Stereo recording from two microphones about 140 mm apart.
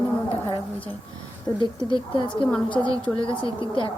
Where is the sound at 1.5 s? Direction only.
35° left (ahead or behind).